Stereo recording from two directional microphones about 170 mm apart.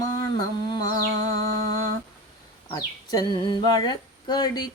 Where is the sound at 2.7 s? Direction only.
20° left (ahead or behind).